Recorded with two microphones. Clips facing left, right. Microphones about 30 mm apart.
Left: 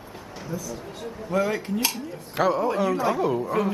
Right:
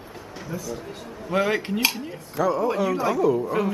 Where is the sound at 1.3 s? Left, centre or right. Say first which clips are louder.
Right 2 dB; right.